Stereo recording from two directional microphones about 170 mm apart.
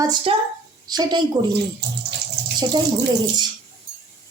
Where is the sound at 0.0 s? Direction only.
25° right (ahead or behind).